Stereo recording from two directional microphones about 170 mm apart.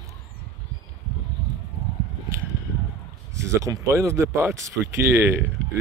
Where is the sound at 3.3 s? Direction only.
20° right (ahead or behind).